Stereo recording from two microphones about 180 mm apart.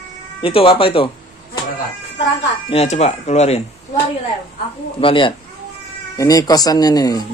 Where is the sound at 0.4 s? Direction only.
30° left (ahead or behind).